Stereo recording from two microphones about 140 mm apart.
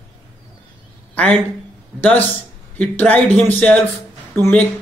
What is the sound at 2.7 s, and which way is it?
A man's voice, 10° left (ahead or behind).